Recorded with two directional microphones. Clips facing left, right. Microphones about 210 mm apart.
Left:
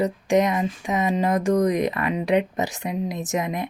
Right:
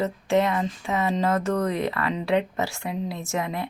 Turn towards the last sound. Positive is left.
turn(degrees=15)  # may be behind; listen again after turning